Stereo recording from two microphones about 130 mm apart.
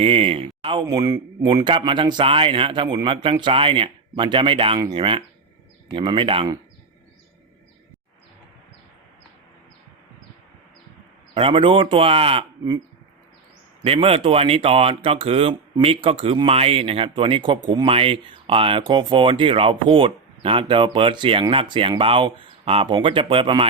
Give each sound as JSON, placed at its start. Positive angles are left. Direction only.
{"t": 0.0, "sound": "speech", "side_deg": -50}
{"t": 0.9, "sound": "speech", "side_deg": -30}
{"t": 11.3, "sound": "speech", "side_deg": -45}
{"t": 13.8, "sound": "speech", "side_deg": -50}